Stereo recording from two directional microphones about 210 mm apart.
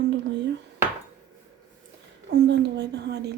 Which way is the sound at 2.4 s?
55° right (ahead or behind).